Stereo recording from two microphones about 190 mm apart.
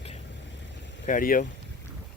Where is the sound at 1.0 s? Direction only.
45° left (ahead or behind).